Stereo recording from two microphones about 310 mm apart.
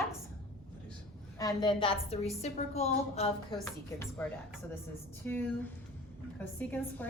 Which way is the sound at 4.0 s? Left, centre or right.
Centre.